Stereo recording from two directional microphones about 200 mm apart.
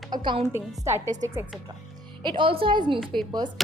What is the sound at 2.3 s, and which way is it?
Speech, 25° right (ahead or behind).